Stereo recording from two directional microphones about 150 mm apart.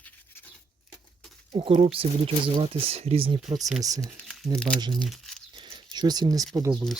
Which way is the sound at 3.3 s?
Centre (ahead or behind).